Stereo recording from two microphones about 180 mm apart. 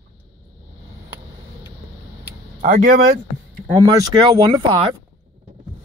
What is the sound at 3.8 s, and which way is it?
Speech, 25° right (ahead or behind).